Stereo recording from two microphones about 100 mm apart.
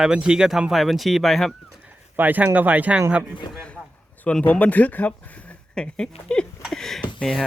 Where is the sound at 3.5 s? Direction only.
10° left (ahead or behind).